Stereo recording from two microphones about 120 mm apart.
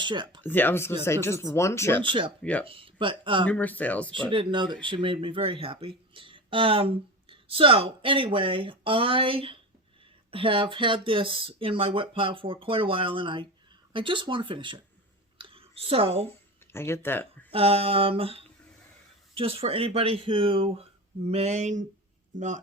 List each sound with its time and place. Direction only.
0.0 s speech: 40° right (ahead or behind)
0.4 s speech: 15° left (ahead or behind)
2.4 s speech: 10° left (ahead or behind)
2.6 s speech: 50° right (ahead or behind)
3.4 s speech: 10° left (ahead or behind)
4.1 s speech: 45° right (ahead or behind)
15.4 s a sound: 50° right (ahead or behind)
16.7 s speech: 20° left (ahead or behind)
17.5 s speech: 50° right (ahead or behind)
21.2 s speech: 65° right (ahead or behind); by 22.6 s 90° right